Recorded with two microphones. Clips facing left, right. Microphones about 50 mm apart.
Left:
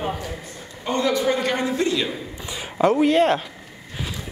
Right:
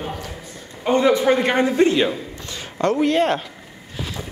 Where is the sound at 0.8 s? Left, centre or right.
Right.